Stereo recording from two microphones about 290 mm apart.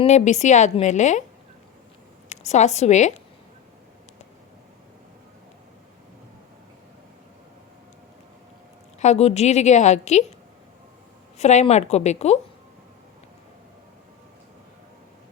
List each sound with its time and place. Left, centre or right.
0.0 s a woman's voice: left
2.3 s a woman's voice: left
9.0 s a woman's voice: left
11.3 s a woman's voice: left